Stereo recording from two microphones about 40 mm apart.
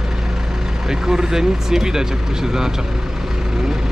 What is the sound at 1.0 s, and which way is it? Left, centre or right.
Speech, centre.